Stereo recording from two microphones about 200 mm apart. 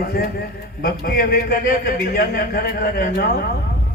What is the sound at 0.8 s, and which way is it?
A man's voice, 45° left (ahead or behind).